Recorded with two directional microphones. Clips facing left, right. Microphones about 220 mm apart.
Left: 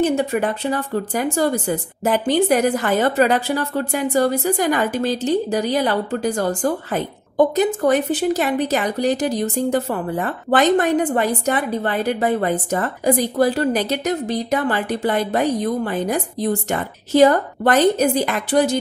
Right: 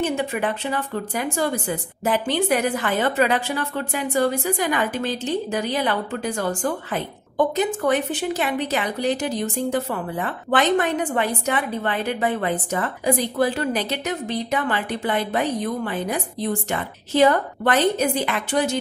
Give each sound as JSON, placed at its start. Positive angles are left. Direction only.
{"t": 0.0, "sound": "speech", "side_deg": 40}